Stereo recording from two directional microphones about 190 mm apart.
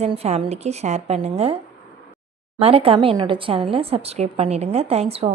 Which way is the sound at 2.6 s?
30° right (ahead or behind).